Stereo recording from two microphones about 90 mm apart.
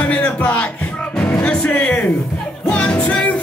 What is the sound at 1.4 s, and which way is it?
Music, 10° left (ahead or behind).